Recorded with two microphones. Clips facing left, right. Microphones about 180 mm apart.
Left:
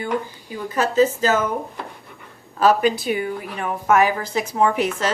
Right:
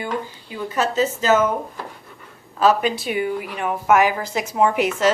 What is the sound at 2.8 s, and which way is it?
A woman's voice, 40° left (ahead or behind).